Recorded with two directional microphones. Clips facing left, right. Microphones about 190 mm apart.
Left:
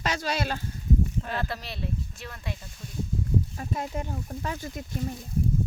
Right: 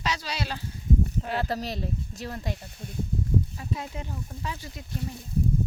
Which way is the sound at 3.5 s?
50° left (ahead or behind).